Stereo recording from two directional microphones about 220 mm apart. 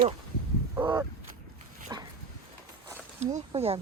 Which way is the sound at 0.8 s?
10° right (ahead or behind).